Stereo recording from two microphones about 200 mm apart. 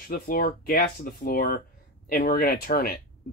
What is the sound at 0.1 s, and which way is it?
Speech, 45° left (ahead or behind).